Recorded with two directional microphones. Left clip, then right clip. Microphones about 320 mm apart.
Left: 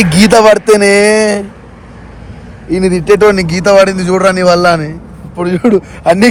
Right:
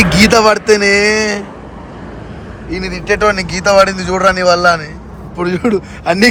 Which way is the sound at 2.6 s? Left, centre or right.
Centre.